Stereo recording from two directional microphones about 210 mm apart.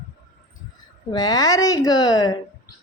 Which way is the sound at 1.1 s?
20° left (ahead or behind).